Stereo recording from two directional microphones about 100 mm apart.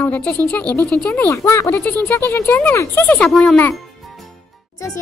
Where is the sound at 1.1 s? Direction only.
25° left (ahead or behind).